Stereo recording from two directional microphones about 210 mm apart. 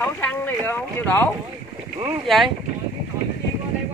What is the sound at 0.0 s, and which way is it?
Speech, 10° left (ahead or behind).